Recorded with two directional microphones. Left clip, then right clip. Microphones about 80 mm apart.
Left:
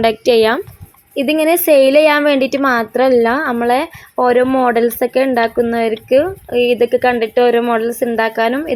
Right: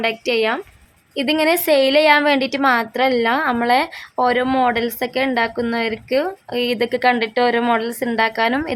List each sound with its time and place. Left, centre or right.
0.0 s speech: left
1.1 s a woman's voice: left
3.6 s a woman's voice: left
4.6 s speech: left